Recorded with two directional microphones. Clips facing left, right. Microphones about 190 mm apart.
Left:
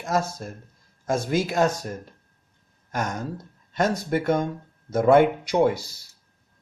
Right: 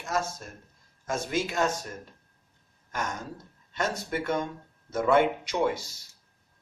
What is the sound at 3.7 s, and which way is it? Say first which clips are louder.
Speech: left 7 dB; 45° left (ahead or behind).